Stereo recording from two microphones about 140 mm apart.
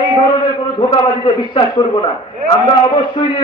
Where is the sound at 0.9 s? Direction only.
35° left (ahead or behind).